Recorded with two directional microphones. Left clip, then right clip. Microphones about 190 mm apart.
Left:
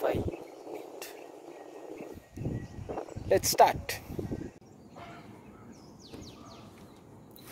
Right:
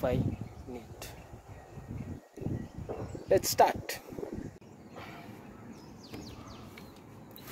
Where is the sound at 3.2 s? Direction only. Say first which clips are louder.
Left 2 dB; 10° left (ahead or behind).